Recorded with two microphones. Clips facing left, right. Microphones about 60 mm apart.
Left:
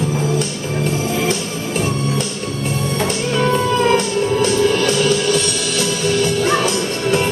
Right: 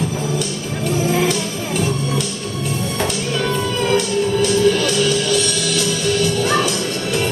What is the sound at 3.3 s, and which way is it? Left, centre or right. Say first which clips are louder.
Music: left 7 dB; left.